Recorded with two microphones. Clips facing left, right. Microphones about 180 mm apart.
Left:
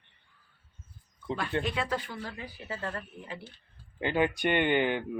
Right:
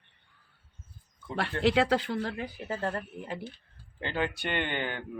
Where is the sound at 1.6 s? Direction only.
85° right; by 2.6 s 60° right (ahead or behind).